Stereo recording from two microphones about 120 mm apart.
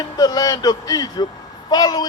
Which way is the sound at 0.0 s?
35° left (ahead or behind).